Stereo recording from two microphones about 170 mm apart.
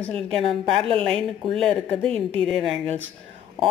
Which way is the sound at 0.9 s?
35° right (ahead or behind).